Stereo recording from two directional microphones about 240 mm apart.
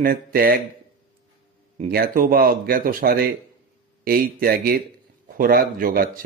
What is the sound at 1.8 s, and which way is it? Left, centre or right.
Speech, right.